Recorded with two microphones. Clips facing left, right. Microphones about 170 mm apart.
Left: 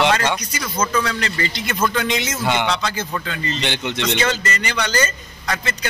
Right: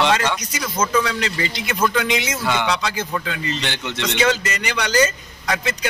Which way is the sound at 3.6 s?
20° left (ahead or behind).